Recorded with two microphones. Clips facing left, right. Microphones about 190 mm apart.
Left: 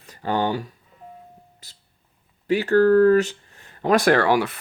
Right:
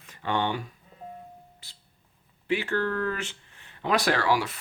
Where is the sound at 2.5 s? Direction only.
40° left (ahead or behind).